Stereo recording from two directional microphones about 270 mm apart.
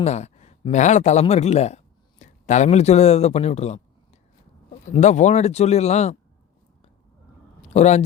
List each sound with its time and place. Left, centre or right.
0.0 s speech: left
4.9 s speech: left
7.7 s speech: left